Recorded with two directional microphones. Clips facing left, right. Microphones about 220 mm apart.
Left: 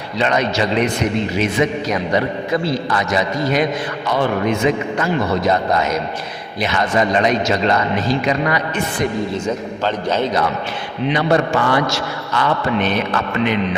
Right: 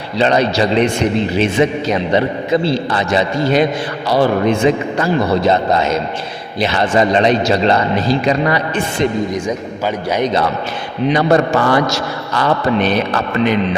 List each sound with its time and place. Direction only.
0.2 s a man's voice: 30° right (ahead or behind)
9.3 s a man's voice: 10° right (ahead or behind)
11.0 s a man's voice: 40° right (ahead or behind)